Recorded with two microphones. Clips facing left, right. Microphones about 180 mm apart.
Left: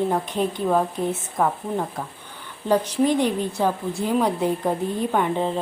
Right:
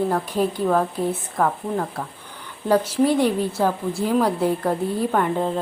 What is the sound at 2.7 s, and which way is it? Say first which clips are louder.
Speech: right 1 dB; 10° left (ahead or behind).